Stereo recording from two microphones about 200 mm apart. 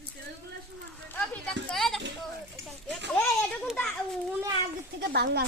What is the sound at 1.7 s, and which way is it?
Speech, centre (ahead or behind).